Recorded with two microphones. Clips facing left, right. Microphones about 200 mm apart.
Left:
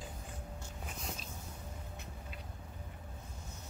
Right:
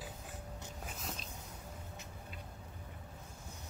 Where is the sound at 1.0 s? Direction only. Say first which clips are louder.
Left 2 dB; centre (ahead or behind).